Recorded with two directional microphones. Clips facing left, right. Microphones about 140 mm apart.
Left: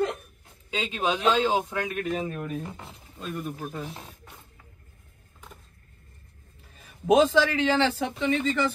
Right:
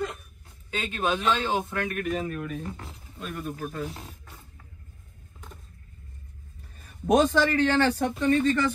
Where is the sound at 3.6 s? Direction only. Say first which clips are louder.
Right 2 dB; 10° left (ahead or behind).